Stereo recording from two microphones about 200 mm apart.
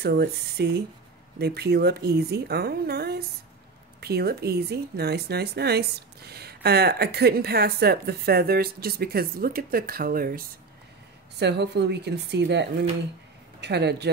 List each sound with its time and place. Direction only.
0.0 s a woman's voice: 55° right (ahead or behind)
11.3 s speech: 55° right (ahead or behind)